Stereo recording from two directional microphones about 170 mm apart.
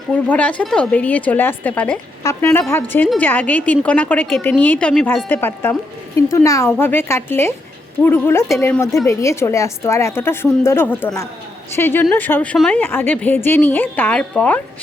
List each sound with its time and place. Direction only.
0.3 s a woman's voice: 10° left (ahead or behind)